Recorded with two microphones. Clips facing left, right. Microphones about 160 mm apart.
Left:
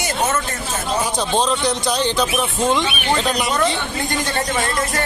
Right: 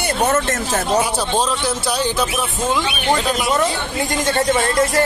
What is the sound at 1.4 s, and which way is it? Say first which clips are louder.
Speech: left 1 dB; 5° right (ahead or behind).